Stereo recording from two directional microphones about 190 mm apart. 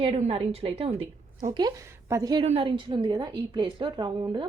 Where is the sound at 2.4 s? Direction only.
30° right (ahead or behind).